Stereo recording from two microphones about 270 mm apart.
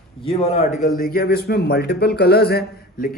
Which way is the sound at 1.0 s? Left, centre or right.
Left.